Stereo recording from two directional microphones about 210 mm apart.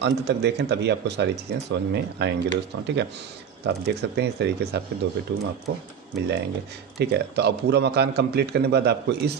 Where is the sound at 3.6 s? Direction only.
50° right (ahead or behind).